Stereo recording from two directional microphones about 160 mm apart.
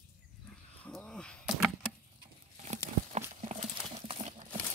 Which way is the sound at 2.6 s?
45° right (ahead or behind).